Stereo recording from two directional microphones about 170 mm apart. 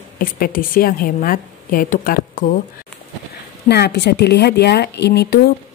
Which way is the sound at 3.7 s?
80° left.